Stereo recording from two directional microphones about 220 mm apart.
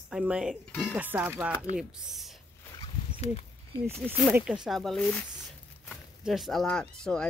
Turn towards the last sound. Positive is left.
turn(degrees=5)  # may be behind; listen again after turning